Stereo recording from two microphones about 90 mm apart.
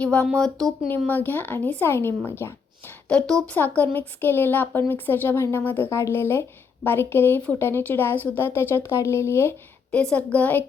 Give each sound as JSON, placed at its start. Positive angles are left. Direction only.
{"t": 0.0, "sound": "a woman's voice", "side_deg": 15}
{"t": 0.9, "sound": "speech", "side_deg": 20}
{"t": 3.1, "sound": "speech", "side_deg": 10}
{"t": 9.9, "sound": "a woman's voice", "side_deg": 10}